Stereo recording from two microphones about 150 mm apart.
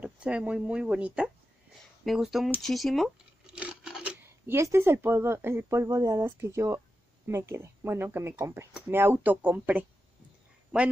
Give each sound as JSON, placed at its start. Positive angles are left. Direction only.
{"t": 0.0, "sound": "a woman's voice", "side_deg": -5}
{"t": 3.5, "sound": "a sound", "side_deg": -5}
{"t": 4.6, "sound": "a woman's voice", "side_deg": -20}